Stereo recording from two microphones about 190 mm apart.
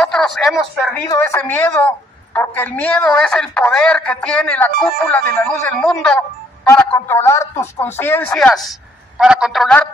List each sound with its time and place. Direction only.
0.0 s speech: centre (ahead or behind)
1.0 s a woman's voice: 15° left (ahead or behind)